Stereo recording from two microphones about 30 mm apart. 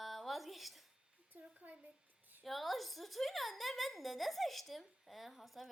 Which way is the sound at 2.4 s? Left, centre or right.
Centre.